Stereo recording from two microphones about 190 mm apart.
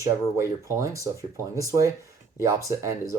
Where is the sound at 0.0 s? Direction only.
15° right (ahead or behind).